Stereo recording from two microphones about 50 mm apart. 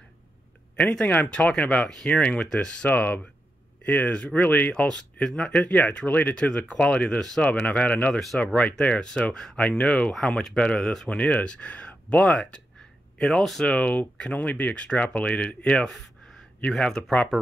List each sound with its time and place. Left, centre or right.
0.7 s speech: left
2.9 s speech: left
6.4 s speech: left
7.2 s speech: centre
7.4 s speech: left
8.1 s speech: centre
8.8 s speech: left
9.7 s speech: left
10.1 s speech: centre
13.2 s speech: centre
13.7 s speech: left